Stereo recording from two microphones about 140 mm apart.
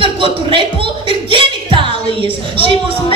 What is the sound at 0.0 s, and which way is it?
Music, 40° right (ahead or behind).